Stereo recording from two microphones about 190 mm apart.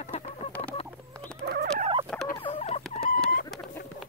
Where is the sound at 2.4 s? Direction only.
30° left (ahead or behind).